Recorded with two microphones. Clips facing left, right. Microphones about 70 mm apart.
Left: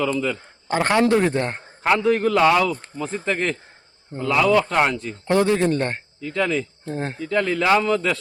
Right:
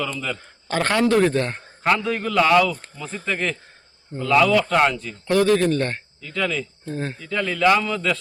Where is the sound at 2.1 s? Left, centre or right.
Left.